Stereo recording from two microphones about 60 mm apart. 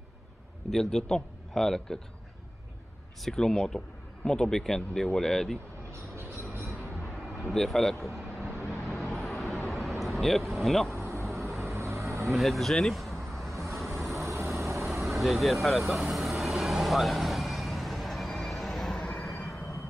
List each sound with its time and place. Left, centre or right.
0.7 s speech: centre
3.3 s speech: centre
5.9 s music: right
7.2 s speech: centre
8.6 s vehicle: centre
11.6 s vehicle: right
12.3 s vehicle: centre
14.1 s vehicle: right
14.7 s vehicle: centre
15.0 s speech: centre
15.9 s vehicle: centre